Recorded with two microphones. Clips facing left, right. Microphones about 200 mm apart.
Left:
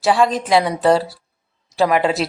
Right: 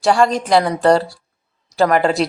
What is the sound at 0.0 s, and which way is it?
Speech, centre (ahead or behind).